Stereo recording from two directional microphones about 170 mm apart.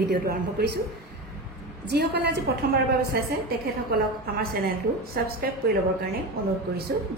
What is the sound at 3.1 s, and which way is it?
Speech, 65° right (ahead or behind).